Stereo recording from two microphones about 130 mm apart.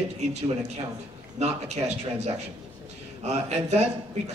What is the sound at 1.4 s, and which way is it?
Speech, 60° right (ahead or behind).